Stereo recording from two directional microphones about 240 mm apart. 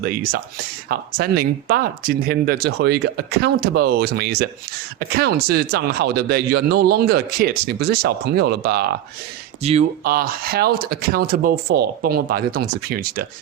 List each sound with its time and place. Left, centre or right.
0.0 s speech: right
9.6 s speech: right
10.0 s speech: right